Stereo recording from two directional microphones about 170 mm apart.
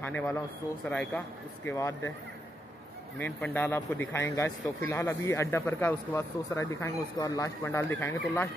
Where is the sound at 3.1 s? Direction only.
10° left (ahead or behind).